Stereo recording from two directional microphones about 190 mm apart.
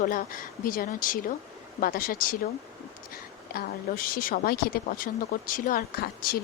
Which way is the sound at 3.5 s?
50° left (ahead or behind).